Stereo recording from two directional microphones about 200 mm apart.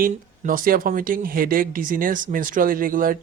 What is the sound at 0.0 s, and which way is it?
Speech, 45° right (ahead or behind).